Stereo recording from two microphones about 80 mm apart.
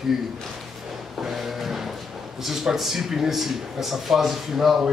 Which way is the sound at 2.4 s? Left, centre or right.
Centre.